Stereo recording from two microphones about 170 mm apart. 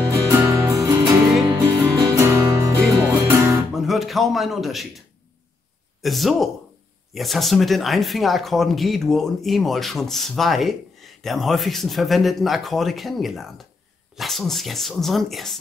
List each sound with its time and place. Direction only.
0.3 s music: 10° right (ahead or behind)
3.7 s a man's voice: centre (ahead or behind)
6.0 s speech: centre (ahead or behind)